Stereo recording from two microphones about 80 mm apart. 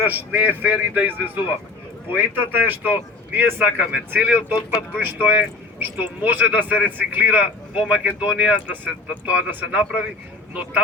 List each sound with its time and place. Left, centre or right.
0.1 s speech: centre